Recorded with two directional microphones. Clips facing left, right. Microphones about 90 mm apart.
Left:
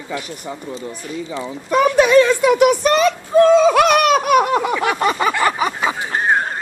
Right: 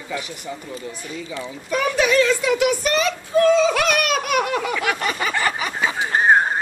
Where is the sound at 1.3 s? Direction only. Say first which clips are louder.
Left 4 dB; 35° left (ahead or behind).